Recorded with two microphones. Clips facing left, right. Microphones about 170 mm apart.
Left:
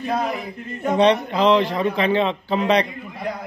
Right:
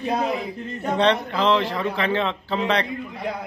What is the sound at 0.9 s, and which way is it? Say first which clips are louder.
A man's voice: left 4 dB; 15° left (ahead or behind).